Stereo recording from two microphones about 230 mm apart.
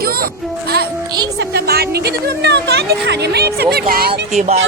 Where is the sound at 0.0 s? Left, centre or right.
Right.